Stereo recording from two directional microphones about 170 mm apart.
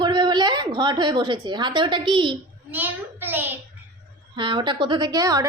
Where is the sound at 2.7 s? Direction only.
10° right (ahead or behind).